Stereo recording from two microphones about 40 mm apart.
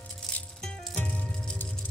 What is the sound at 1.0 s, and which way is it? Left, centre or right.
Music, left.